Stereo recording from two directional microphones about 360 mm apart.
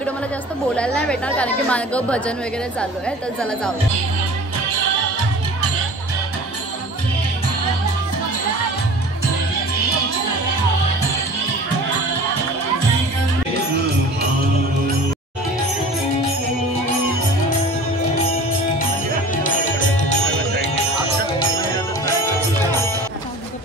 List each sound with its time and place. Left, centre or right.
0.7 s speech: centre